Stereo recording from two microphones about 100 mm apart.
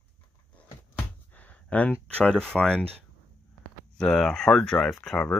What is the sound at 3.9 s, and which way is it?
Speech, 5° left (ahead or behind).